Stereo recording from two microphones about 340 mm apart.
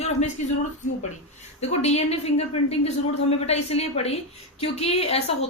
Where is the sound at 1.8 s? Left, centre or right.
Centre.